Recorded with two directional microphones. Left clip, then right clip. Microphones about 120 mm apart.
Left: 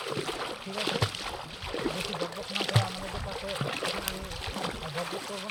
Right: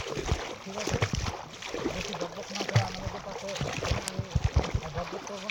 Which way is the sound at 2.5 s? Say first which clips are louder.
Left 2 dB; 35° right (ahead or behind).